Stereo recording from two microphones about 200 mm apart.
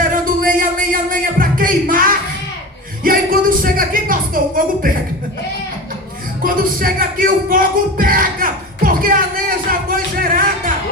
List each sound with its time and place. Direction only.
0.0 s music: 45° right (ahead or behind)
3.0 s a sound: 45° right (ahead or behind)
3.6 s music: 45° right (ahead or behind)
6.4 s music: 45° right (ahead or behind)